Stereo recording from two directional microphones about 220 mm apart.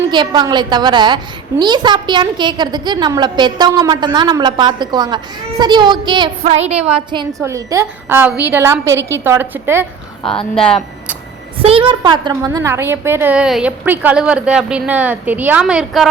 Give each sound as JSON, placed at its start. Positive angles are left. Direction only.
{"t": 0.1, "sound": "a woman's voice", "side_deg": -20}
{"t": 11.6, "sound": "a woman's voice", "side_deg": -25}